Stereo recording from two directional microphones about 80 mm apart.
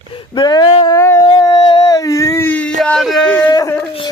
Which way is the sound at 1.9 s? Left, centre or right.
Left.